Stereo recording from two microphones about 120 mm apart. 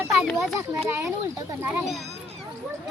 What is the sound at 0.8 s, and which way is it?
Speech, 25° right (ahead or behind).